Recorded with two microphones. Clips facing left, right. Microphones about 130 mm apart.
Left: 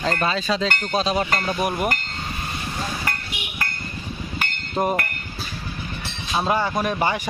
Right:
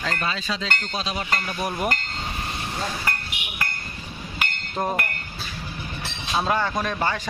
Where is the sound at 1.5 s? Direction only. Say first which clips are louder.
Left 5 dB; 20° left (ahead or behind).